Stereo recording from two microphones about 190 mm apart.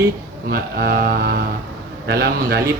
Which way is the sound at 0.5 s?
55° right (ahead or behind).